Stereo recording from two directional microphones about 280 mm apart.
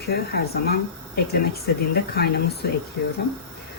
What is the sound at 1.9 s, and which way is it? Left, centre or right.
Speech, left.